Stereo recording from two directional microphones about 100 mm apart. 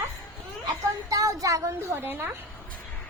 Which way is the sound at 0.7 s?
35° right (ahead or behind).